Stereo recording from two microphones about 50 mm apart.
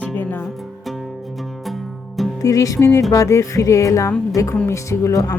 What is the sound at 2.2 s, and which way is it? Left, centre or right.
Music, centre.